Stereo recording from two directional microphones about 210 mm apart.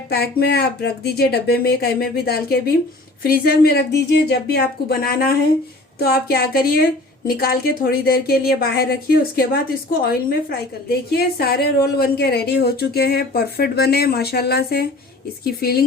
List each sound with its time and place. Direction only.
0.1 s speech: 50° left (ahead or behind)